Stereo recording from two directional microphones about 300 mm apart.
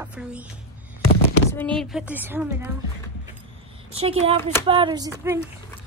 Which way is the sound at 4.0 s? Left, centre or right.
Centre.